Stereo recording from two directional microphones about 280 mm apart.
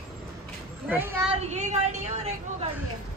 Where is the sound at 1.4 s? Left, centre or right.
Right.